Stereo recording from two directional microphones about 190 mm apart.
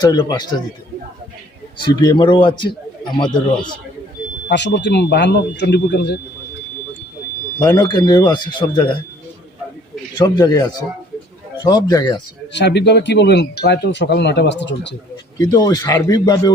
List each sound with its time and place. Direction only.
0.0 s speech: 20° left (ahead or behind)
1.8 s speech: 20° left (ahead or behind)
4.4 s speech: 65° left (ahead or behind)
7.6 s speech: 20° left (ahead or behind)
10.2 s speech: 20° left (ahead or behind)
12.5 s speech: 65° left (ahead or behind)
15.4 s a man's voice: 20° left (ahead or behind)